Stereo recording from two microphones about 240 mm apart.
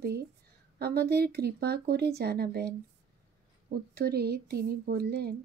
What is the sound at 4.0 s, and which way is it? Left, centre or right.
Speech, right.